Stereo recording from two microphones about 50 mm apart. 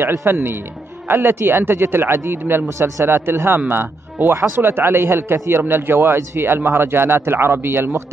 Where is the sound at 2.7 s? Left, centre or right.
Right.